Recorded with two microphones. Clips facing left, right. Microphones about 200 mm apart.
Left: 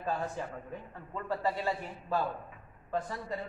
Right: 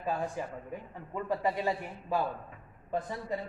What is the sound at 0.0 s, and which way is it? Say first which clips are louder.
A man's voice: right 1 dB; 15° right (ahead or behind).